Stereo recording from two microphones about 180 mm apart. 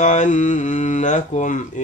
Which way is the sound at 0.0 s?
40° left (ahead or behind).